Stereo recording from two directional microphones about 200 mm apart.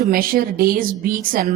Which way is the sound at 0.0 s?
45° right (ahead or behind).